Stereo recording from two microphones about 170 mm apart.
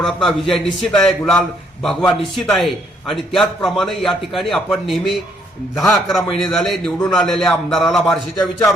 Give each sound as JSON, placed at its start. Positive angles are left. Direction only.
{"t": 0.0, "sound": "a man's voice", "side_deg": 0}